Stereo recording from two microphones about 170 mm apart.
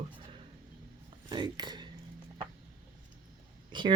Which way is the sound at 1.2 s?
25° right (ahead or behind).